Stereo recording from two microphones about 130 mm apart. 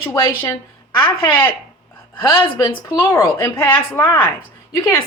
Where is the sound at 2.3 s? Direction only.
40° left (ahead or behind).